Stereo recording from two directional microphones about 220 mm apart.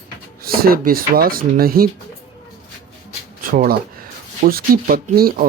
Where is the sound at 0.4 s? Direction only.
45° right (ahead or behind).